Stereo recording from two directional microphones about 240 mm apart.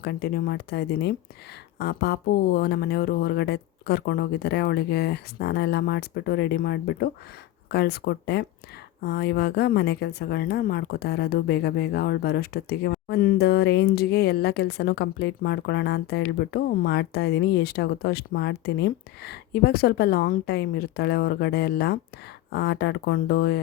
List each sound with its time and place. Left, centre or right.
0.0 s a woman's voice: left